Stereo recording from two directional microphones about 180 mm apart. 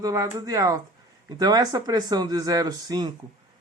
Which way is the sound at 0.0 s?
20° right (ahead or behind).